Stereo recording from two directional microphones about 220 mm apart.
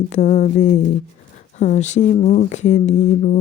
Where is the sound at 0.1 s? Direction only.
30° left (ahead or behind).